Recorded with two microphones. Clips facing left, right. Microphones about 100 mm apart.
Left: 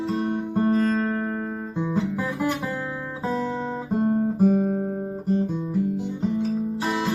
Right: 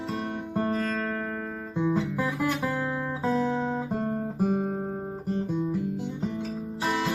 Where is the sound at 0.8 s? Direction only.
10° left (ahead or behind).